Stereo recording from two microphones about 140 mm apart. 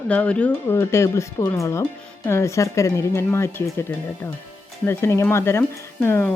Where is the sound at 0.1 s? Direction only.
10° left (ahead or behind).